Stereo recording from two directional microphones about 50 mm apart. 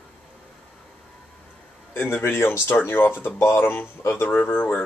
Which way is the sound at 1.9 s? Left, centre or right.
Left.